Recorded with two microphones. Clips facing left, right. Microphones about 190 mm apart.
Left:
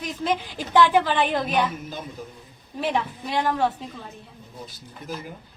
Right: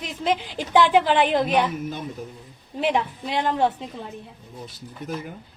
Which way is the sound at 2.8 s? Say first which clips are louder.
Right 2 dB; 20° right (ahead or behind).